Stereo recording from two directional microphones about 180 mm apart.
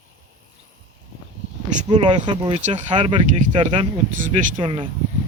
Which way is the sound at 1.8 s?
25° right (ahead or behind).